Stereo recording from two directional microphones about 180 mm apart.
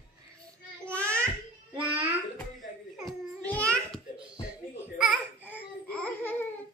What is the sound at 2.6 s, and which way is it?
Babbling, centre (ahead or behind).